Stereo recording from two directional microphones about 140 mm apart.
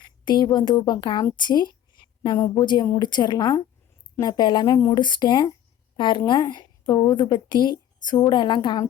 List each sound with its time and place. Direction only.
0.0 s a woman's voice: 30° left (ahead or behind)